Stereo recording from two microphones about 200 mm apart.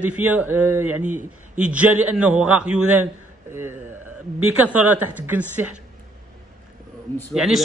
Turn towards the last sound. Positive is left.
turn(degrees=0)  # may be behind; listen again after turning